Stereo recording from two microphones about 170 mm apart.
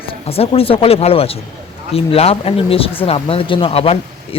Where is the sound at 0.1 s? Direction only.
35° left (ahead or behind).